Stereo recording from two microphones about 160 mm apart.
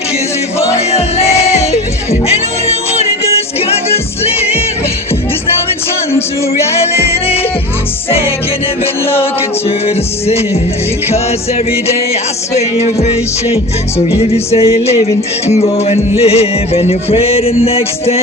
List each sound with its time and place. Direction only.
0.9 s music: 40° left (ahead or behind)
6.7 s music: 40° left (ahead or behind)
9.6 s music: 40° left (ahead or behind)
14.2 s music: 40° left (ahead or behind)